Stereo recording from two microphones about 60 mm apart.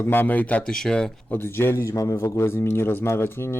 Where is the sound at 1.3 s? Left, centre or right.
Left.